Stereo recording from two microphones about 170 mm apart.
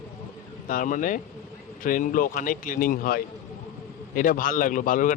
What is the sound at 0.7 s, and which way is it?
Speech, 50° left (ahead or behind).